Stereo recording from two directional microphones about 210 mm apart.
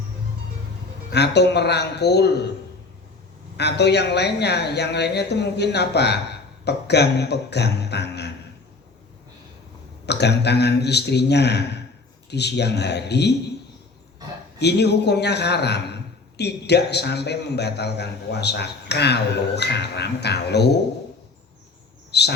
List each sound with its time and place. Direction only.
1.1 s a man's voice: 55° left (ahead or behind)
3.6 s a man's voice: 50° left (ahead or behind)
10.1 s a man's voice: 55° left (ahead or behind)
14.6 s a man's voice: 50° left (ahead or behind)
22.1 s speech: 50° left (ahead or behind)